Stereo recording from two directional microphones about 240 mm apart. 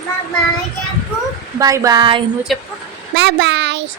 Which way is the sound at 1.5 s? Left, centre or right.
Centre.